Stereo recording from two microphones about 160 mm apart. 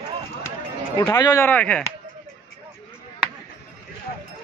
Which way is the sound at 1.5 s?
10° left (ahead or behind).